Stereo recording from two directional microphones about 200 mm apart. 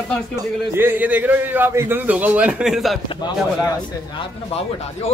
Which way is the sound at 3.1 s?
20° left (ahead or behind).